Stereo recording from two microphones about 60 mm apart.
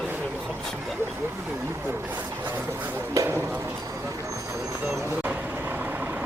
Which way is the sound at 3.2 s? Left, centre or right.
Right.